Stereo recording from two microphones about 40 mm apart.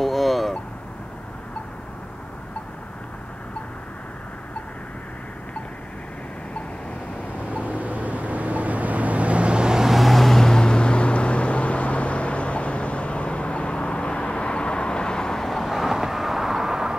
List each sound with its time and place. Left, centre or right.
0.0 s vehicle: centre
7.6 s vehicle: right; by 9.8 s centre
9.8 s vehicle: centre
15.4 s vehicle: centre